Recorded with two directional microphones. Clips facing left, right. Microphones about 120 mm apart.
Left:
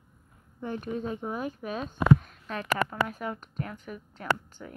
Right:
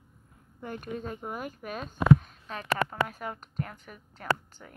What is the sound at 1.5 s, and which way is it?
Speech, 25° left (ahead or behind).